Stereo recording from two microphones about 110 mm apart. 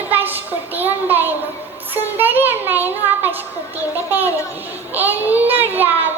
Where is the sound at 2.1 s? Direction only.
15° right (ahead or behind).